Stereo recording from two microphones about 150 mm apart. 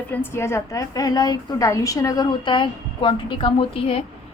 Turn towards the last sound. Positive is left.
turn(degrees=35)  # may be behind; listen again after turning